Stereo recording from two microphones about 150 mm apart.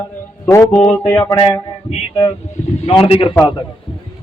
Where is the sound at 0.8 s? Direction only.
5° left (ahead or behind).